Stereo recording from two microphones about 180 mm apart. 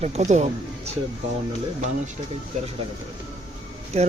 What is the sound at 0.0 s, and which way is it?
Speech, 40° right (ahead or behind).